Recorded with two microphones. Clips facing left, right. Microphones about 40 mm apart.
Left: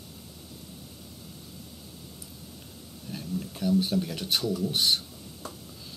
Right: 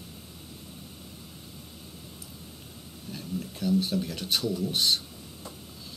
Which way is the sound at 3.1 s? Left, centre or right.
Centre.